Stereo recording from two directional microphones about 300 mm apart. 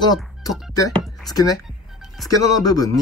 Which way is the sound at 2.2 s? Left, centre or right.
Centre.